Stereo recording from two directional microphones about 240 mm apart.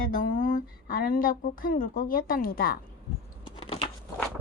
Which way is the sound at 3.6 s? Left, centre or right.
Left.